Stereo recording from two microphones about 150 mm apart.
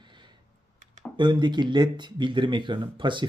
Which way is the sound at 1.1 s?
30° right (ahead or behind).